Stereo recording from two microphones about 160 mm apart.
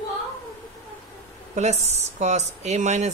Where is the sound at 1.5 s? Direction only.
45° right (ahead or behind).